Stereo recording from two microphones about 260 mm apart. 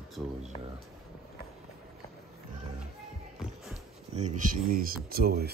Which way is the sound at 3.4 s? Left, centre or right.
Centre.